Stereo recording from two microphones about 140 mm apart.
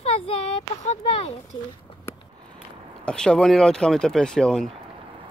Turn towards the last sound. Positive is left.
turn(degrees=5)  # may be behind; listen again after turning